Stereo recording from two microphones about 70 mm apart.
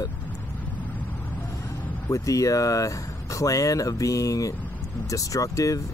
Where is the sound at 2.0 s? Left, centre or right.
Left.